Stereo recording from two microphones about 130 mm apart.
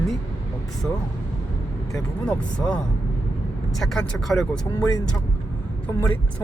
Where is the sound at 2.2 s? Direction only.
5° left (ahead or behind).